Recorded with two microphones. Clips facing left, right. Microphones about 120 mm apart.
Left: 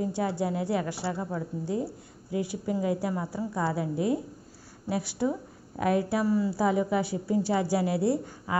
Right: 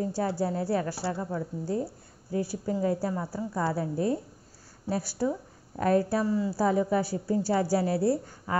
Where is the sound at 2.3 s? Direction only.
35° right (ahead or behind).